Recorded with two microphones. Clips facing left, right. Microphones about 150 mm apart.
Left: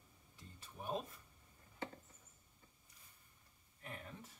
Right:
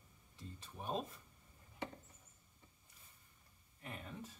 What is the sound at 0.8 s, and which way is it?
Speech, 25° right (ahead or behind).